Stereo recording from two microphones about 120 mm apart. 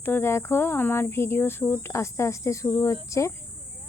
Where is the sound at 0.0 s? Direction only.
20° left (ahead or behind).